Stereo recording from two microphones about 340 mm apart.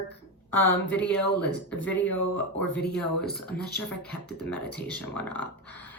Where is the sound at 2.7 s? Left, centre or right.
Left.